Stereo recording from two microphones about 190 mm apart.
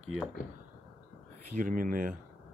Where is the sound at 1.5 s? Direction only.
45° right (ahead or behind).